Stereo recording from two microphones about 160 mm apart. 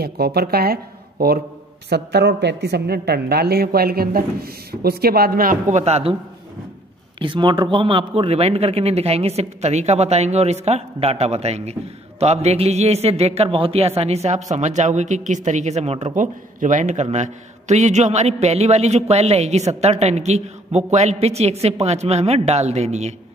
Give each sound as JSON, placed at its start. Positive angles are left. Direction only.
{"t": 0.0, "sound": "a woman's voice", "side_deg": -80}
{"t": 1.9, "sound": "a woman's voice", "side_deg": -90}
{"t": 7.2, "sound": "a man's voice", "side_deg": -30}